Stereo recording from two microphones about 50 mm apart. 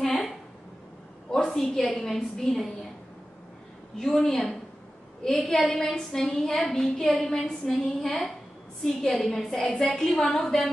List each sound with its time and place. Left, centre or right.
0.0 s a sound: centre
1.3 s a woman's voice: centre
4.0 s a woman's voice: centre